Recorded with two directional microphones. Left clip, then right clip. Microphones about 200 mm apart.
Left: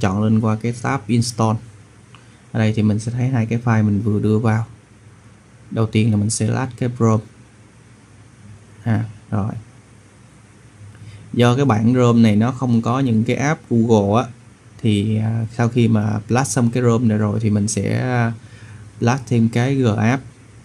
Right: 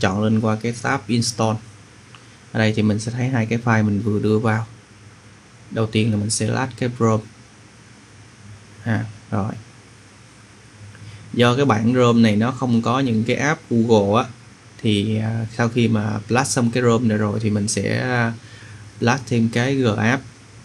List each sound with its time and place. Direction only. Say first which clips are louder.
0.0 s speech: even; 15° left (ahead or behind)
5.8 s speech: left 1 dB; 20° left (ahead or behind)
8.8 s speech: even; 15° left (ahead or behind)
11.3 s speech: even; 15° left (ahead or behind)